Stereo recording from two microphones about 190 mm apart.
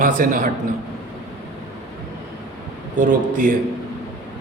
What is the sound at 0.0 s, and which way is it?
Speech, 45° right (ahead or behind).